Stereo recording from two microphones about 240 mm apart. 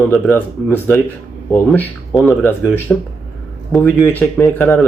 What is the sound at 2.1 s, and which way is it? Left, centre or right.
Speech, centre.